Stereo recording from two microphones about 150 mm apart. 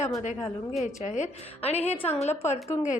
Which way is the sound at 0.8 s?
55° left (ahead or behind).